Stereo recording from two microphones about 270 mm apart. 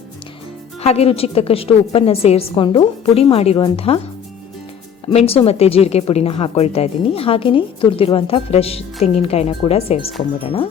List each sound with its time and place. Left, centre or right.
0.8 s speech: left
5.0 s speech: left